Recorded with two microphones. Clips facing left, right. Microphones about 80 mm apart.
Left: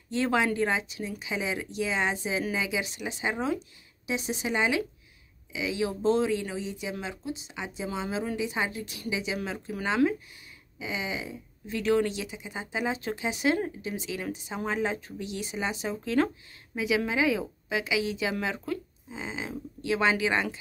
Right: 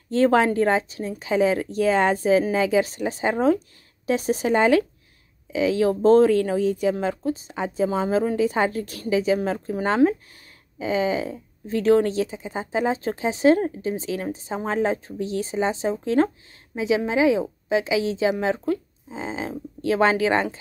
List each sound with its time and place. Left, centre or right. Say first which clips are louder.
0.1 s a woman's voice: right 8 dB; right